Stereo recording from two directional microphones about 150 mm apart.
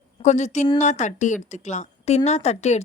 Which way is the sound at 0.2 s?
50° left (ahead or behind).